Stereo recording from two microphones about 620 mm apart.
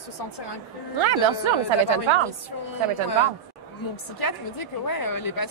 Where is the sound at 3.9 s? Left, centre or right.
Left.